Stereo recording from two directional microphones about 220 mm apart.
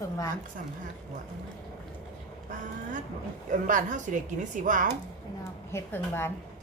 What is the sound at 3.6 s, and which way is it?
A woman's voice, 35° right (ahead or behind).